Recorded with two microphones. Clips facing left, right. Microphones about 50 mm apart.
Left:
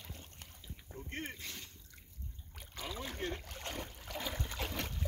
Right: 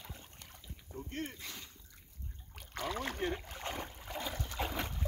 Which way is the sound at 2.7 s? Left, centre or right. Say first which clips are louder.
Right 5 dB; right.